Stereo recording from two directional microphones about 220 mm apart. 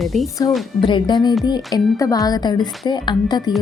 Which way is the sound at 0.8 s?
20° left (ahead or behind).